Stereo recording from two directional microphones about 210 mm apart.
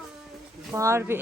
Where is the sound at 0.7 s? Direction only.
15° right (ahead or behind).